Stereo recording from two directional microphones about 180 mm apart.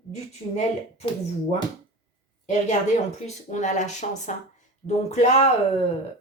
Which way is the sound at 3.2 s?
40° left (ahead or behind).